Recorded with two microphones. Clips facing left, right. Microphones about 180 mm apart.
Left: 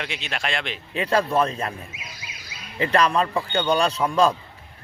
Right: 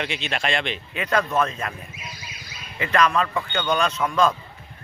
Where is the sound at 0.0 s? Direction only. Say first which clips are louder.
Right 3 dB; centre (ahead or behind).